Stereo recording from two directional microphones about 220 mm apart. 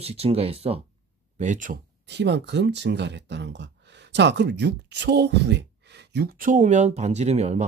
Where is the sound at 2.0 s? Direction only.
50° right (ahead or behind); by 7.6 s 30° right (ahead or behind).